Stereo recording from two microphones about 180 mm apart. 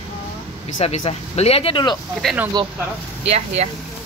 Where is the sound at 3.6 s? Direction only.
40° right (ahead or behind).